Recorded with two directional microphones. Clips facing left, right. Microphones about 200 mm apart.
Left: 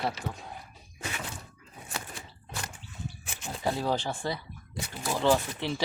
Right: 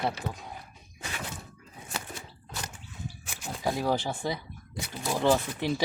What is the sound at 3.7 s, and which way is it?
Speech, 15° right (ahead or behind).